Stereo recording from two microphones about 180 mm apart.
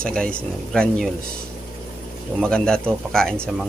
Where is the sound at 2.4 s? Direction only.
5° left (ahead or behind).